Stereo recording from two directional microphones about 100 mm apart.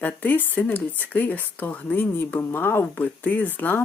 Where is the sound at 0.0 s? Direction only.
15° left (ahead or behind).